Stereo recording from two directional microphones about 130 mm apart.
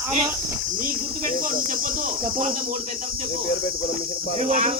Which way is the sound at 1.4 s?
90° right.